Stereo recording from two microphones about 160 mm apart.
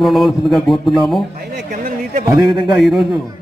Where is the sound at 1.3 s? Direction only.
60° right (ahead or behind).